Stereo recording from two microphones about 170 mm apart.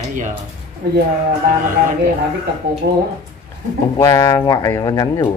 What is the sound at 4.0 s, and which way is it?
Speech, 20° left (ahead or behind).